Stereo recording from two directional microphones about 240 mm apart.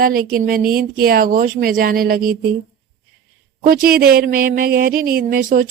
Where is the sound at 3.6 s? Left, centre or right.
Right.